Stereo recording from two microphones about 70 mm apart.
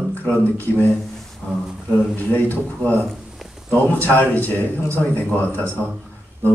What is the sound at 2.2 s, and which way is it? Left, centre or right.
A man's voice, left.